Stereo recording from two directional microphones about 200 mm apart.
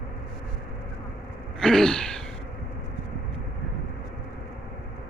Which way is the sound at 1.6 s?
5° left (ahead or behind).